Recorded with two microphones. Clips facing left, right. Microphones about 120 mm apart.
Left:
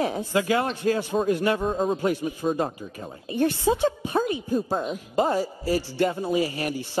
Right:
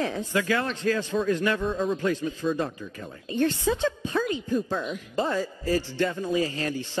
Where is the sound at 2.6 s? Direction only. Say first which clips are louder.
Left 2 dB; 35° left (ahead or behind).